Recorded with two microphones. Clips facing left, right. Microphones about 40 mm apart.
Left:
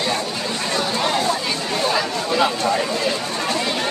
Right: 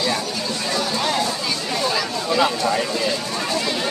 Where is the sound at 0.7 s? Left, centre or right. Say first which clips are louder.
Left 1 dB; left.